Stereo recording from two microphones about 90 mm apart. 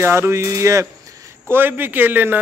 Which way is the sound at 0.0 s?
30° right (ahead or behind).